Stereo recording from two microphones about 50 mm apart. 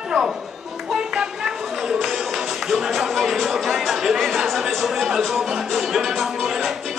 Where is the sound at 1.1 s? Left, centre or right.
Centre.